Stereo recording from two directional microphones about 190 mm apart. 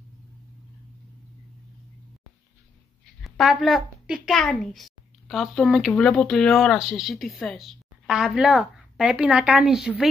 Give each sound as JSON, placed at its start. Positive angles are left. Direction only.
{"t": 3.3, "sound": "a woman's voice", "side_deg": 0}